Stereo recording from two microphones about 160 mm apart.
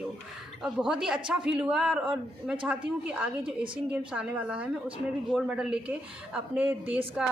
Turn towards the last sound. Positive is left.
turn(degrees=-10)  # may be behind; listen again after turning